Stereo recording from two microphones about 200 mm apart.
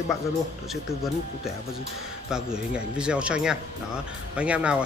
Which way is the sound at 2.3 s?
5° right (ahead or behind).